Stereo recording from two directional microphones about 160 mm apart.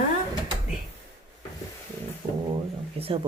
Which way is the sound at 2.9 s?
35° right (ahead or behind).